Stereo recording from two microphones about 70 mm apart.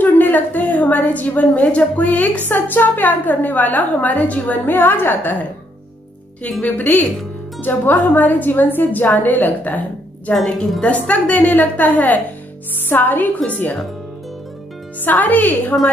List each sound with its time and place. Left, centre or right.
0.0 s a woman's voice: left
6.6 s a woman's voice: left
10.3 s a woman's voice: centre; by 13.7 s left
15.0 s a woman's voice: left